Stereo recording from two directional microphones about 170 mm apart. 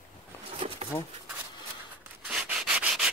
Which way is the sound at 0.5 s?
35° right (ahead or behind).